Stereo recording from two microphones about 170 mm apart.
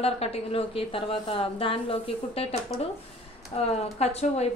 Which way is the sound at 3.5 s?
35° left (ahead or behind).